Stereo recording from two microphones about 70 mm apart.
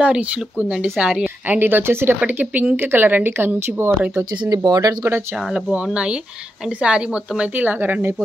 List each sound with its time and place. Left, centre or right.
0.0 s speech: centre
1.5 s speech: right
4.5 s speech: right
5.5 s speech: centre